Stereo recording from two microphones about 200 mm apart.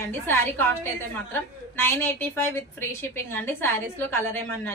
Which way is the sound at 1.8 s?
10° left (ahead or behind).